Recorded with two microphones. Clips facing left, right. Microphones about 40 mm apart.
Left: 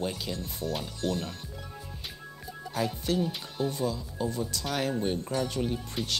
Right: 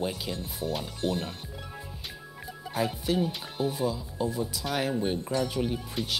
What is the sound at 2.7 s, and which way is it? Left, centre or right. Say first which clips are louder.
Speech: right 1 dB; centre.